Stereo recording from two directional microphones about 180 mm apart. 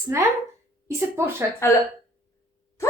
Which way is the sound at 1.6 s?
15° left (ahead or behind).